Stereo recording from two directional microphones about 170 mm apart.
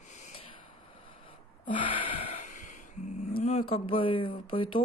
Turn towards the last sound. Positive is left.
turn(degrees=30)  # may be behind; listen again after turning